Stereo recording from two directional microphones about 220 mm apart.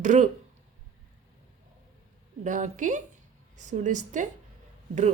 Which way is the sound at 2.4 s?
35° right (ahead or behind).